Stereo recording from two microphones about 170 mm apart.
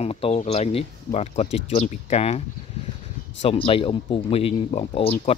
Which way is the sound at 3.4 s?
30° left (ahead or behind).